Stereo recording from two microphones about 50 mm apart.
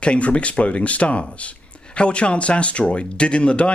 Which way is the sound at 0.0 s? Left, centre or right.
Left.